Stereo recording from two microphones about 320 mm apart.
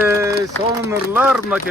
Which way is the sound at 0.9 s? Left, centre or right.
Centre.